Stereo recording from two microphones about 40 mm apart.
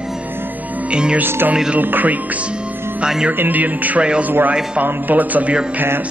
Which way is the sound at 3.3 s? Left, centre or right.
Right.